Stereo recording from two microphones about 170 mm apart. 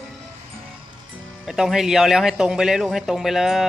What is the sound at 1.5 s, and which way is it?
A man's voice, centre (ahead or behind).